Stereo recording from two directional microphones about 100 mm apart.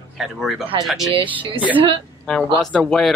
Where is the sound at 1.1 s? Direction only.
55° right (ahead or behind).